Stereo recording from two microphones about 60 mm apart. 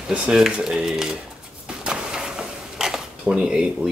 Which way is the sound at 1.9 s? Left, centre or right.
Centre.